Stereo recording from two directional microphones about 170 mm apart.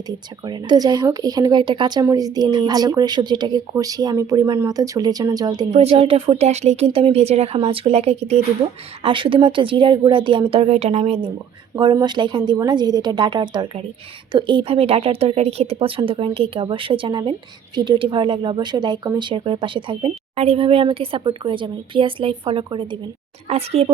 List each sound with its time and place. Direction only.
0.4 s a woman's voice: 25° right (ahead or behind)
5.7 s a woman's voice: 35° right (ahead or behind)